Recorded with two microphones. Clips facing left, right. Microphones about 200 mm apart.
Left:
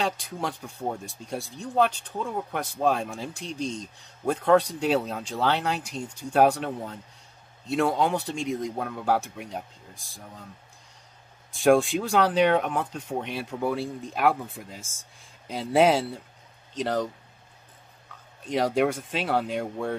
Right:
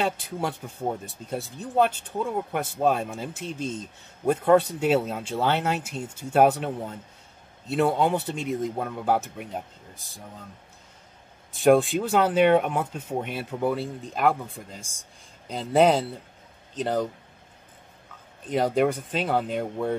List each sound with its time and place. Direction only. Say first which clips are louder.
0.0 s speech: right 2 dB; 5° right (ahead or behind)
7.6 s speech: right 1 dB; 5° right (ahead or behind)
11.5 s speech: right 1 dB; centre (ahead or behind)
18.4 s speech: right 1 dB; centre (ahead or behind)